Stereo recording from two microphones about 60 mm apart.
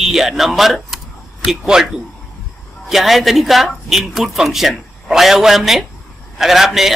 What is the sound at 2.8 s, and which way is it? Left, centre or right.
Speech, centre.